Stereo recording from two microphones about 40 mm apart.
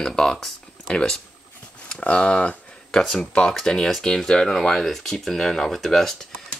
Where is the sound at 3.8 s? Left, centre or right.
Centre.